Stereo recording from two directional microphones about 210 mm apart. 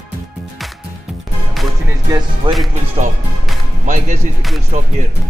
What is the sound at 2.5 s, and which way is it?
Speech, 25° right (ahead or behind).